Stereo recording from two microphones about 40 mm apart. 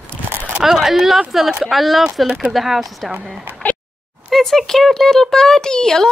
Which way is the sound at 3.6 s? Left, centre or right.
Left.